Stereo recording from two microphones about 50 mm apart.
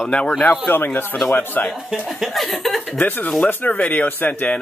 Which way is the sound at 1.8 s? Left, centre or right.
Centre.